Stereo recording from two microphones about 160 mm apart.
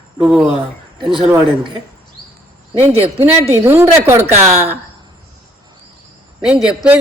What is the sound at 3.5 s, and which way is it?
Speech, 15° right (ahead or behind).